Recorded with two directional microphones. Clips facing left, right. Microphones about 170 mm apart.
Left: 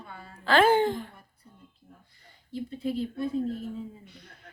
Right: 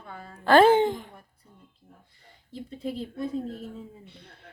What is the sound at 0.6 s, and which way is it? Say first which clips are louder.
Speech: right 3 dB; 25° right (ahead or behind).